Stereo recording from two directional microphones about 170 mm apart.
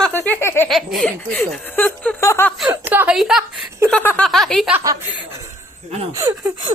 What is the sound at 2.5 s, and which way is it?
Speech, 10° right (ahead or behind).